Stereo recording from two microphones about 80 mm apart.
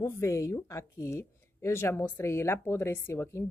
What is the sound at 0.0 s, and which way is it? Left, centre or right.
Speech, left.